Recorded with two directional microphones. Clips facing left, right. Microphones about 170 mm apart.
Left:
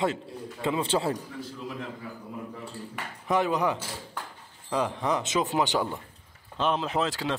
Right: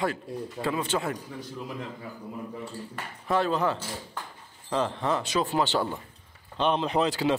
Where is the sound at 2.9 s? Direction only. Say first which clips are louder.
Left 1 dB; 15° left (ahead or behind).